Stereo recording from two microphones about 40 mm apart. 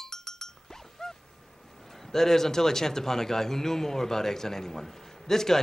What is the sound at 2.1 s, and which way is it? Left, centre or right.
A man's voice, centre.